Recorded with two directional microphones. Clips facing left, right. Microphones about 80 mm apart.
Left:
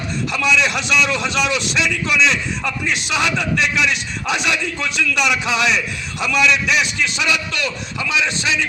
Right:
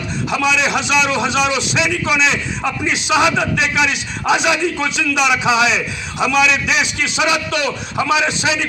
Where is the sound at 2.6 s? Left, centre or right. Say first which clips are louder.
Right 3 dB; centre.